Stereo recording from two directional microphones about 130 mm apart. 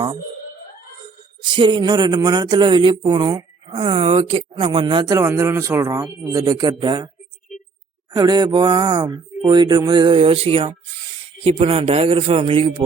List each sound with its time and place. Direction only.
1.5 s speech: 40° right (ahead or behind)
8.1 s a man's voice: 30° right (ahead or behind)